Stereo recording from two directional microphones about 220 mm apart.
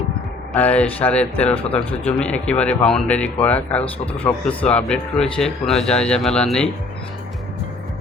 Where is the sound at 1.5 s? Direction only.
25° left (ahead or behind).